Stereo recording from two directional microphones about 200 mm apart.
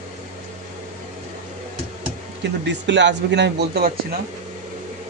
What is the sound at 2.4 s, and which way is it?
Speech, 60° right (ahead or behind).